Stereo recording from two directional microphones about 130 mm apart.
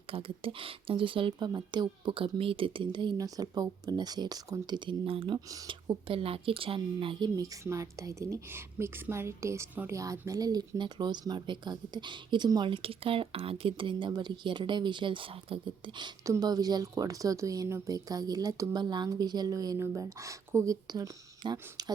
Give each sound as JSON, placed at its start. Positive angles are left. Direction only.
{"t": 0.1, "sound": "speech", "side_deg": -45}